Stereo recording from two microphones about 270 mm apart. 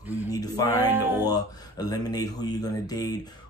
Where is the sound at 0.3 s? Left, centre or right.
Centre.